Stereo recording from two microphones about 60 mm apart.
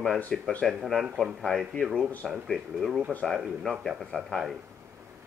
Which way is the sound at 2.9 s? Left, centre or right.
Centre.